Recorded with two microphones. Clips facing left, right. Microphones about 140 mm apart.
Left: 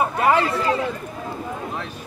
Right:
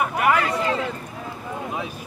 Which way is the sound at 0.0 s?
30° left (ahead or behind).